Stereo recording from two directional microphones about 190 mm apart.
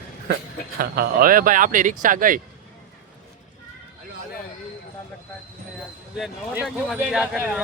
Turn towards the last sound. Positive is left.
turn(degrees=-5)  # may be behind; listen again after turning